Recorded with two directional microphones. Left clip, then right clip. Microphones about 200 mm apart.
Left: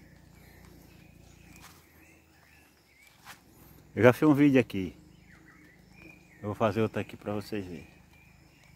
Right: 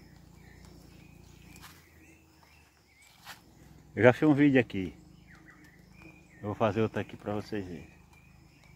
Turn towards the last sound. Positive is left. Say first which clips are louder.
# even
turn(degrees=15)  # may be behind; listen again after turning